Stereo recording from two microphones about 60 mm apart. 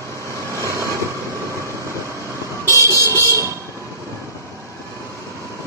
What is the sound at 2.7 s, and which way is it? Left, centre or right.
Vehicle, right.